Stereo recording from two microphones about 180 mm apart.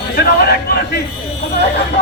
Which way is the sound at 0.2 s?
60° left (ahead or behind).